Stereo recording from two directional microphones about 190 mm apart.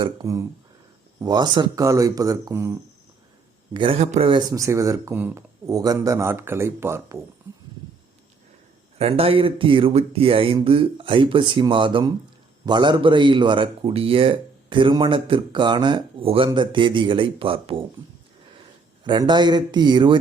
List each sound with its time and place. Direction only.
0.0 s speech: 20° right (ahead or behind)
3.8 s speech: 30° right (ahead or behind); by 7.2 s 15° right (ahead or behind)
9.0 s speech: 30° right (ahead or behind)
19.0 s speech: 25° right (ahead or behind)